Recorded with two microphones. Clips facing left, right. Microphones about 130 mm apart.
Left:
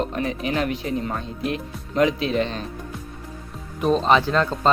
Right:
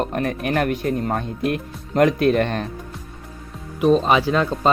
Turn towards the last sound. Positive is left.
turn(degrees=-10)  # may be behind; listen again after turning